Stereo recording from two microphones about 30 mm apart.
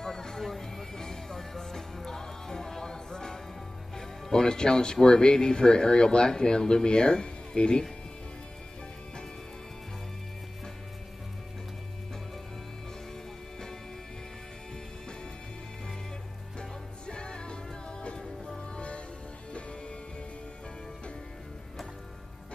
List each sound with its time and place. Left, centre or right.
0.0 s a sound: centre
0.4 s music: centre
5.0 s speech: left
16.5 s music: left